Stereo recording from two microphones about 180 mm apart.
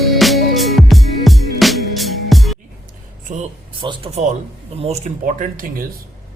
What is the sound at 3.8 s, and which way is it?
Speech, 25° right (ahead or behind).